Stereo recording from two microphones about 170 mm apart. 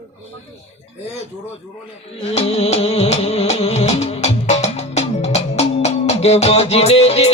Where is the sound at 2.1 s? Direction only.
35° left (ahead or behind).